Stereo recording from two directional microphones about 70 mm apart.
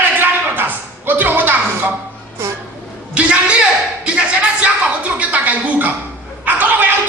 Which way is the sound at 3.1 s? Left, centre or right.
Centre.